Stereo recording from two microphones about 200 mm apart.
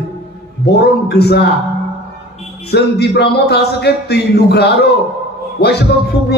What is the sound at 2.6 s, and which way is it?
A man's voice, 55° left (ahead or behind).